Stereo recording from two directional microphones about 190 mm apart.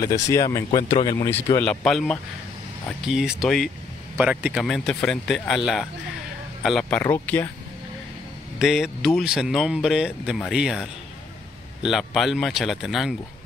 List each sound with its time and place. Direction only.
0.3 s speech: 15° left (ahead or behind)
1.3 s speech: 10° left (ahead or behind)
8.5 s speech: centre (ahead or behind)